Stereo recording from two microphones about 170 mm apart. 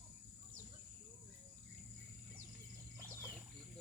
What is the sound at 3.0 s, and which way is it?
Wild animals, 15° right (ahead or behind).